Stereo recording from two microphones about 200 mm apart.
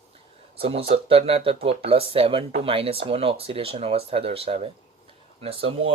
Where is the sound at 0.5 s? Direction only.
30° right (ahead or behind).